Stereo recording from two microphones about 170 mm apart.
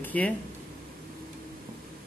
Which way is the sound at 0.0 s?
10° left (ahead or behind).